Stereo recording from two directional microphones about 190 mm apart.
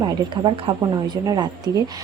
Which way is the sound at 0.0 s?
25° right (ahead or behind).